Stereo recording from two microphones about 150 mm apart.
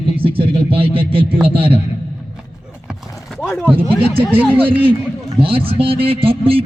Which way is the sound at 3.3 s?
Centre (ahead or behind).